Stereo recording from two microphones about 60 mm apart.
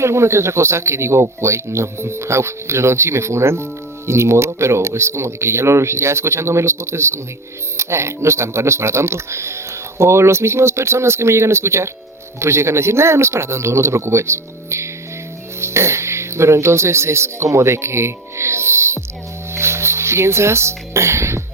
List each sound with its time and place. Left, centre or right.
0.0 s speech: right